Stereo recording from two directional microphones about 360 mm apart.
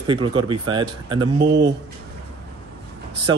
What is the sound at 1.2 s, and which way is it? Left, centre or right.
Speech, right.